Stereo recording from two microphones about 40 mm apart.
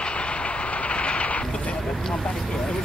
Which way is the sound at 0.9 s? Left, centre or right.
Left.